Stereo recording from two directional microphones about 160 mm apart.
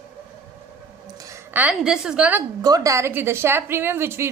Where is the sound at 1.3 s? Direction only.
10° right (ahead or behind).